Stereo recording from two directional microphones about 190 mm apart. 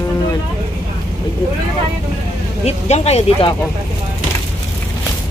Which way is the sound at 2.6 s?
35° left (ahead or behind).